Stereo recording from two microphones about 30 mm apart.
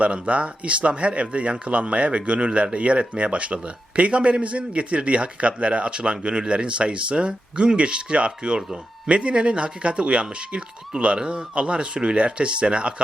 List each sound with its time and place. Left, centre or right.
0.0 s a man's voice: right
11.2 s speech: right
11.5 s speech: right